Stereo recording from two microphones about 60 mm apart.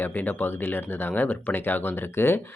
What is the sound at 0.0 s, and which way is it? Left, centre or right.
Speech, left.